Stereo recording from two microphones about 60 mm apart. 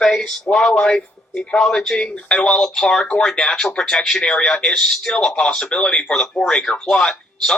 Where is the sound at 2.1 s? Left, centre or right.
Left.